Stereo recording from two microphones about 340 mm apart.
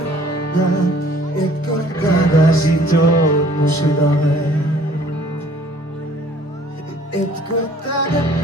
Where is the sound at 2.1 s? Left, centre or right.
Left.